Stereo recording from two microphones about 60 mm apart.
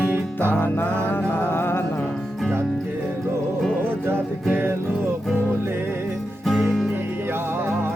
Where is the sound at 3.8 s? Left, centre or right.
Right.